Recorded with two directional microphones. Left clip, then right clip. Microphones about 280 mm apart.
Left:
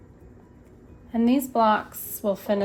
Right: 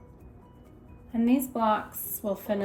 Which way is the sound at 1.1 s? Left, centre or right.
Left.